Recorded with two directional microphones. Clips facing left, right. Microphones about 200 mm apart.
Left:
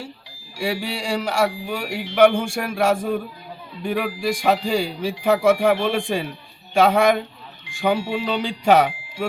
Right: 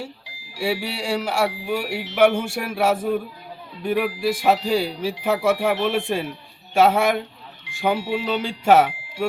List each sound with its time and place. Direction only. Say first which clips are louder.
0.5 s speech: even; 5° right (ahead or behind)